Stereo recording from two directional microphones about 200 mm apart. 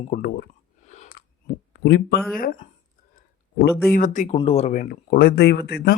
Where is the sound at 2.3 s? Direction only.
45° left (ahead or behind).